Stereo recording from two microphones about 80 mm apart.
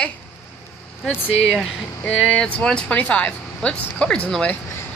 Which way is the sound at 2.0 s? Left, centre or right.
Centre.